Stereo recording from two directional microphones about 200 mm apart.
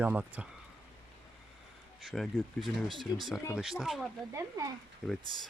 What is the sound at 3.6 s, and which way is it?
Speech, centre (ahead or behind).